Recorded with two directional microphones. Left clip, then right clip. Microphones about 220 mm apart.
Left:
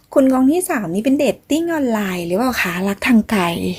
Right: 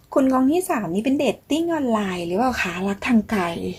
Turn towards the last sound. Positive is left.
turn(degrees=35)  # may be behind; listen again after turning